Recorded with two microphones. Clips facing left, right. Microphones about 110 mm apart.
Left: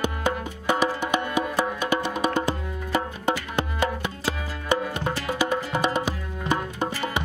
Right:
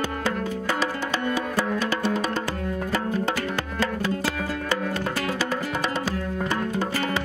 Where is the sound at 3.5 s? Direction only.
20° left (ahead or behind).